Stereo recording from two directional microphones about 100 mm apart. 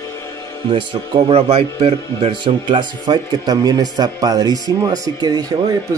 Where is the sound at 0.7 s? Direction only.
50° right (ahead or behind).